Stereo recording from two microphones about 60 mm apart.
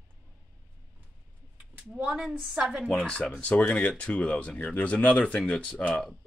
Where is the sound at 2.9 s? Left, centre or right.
Centre.